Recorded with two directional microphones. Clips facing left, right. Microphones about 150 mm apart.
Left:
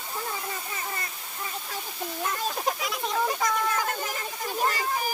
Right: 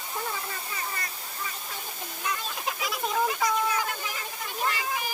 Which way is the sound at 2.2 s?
45° left (ahead or behind).